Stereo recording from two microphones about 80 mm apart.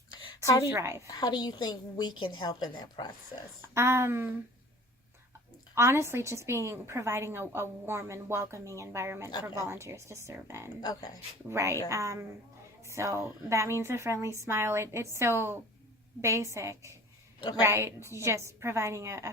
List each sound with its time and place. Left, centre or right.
0.7 s a woman's voice: right
1.0 s a woman's voice: left
2.7 s a woman's voice: left
3.8 s a woman's voice: right
5.7 s a woman's voice: right
10.8 s speech: left
11.4 s a woman's voice: right